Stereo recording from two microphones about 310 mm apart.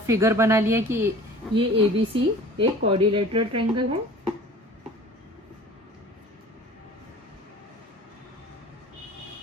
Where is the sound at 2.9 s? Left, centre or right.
Centre.